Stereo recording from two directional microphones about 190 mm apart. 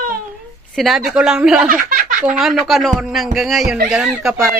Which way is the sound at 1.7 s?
45° right (ahead or behind).